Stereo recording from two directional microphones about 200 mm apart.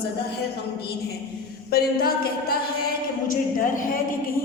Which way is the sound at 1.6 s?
50° left (ahead or behind).